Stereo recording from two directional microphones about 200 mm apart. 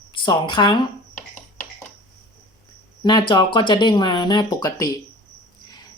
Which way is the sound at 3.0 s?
20° left (ahead or behind).